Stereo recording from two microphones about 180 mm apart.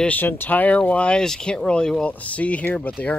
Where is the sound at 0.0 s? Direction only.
10° left (ahead or behind).